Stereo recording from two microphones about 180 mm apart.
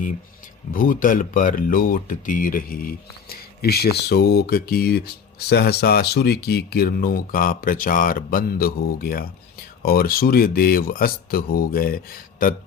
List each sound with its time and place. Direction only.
0.7 s speech: 50° left (ahead or behind)